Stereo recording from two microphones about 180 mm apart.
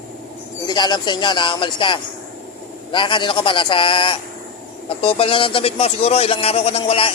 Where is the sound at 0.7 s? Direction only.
25° left (ahead or behind).